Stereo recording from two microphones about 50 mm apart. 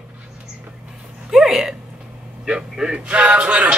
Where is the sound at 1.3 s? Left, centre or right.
Centre.